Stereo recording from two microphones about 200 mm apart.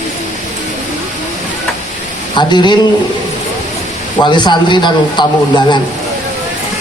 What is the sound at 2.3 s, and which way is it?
Speech, 20° left (ahead or behind).